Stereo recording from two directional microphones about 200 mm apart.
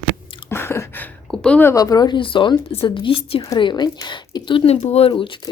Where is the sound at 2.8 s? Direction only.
25° left (ahead or behind).